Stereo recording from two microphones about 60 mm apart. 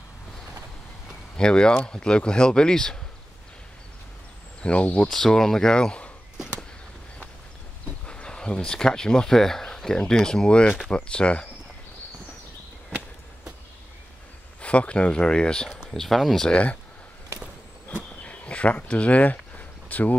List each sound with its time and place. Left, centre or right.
1.3 s speech: centre
4.6 s speech: centre
5.1 s speech: centre
8.1 s speech: centre
14.6 s speech: left
15.9 s speech: centre
16.4 s speech: left
18.2 s a sound: left